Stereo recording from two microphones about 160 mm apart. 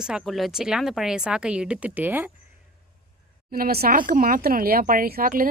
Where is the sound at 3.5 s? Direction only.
70° right (ahead or behind).